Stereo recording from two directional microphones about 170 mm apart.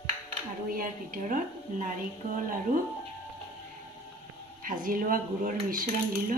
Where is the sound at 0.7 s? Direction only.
55° right (ahead or behind).